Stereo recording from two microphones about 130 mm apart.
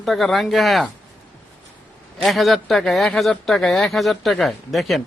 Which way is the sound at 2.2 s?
Centre (ahead or behind).